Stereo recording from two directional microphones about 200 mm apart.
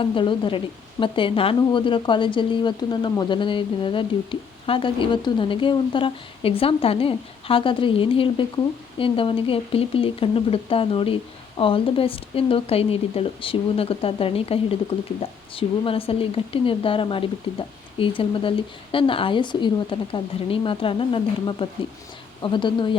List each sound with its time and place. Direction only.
0.0 s a woman's voice: 25° left (ahead or behind)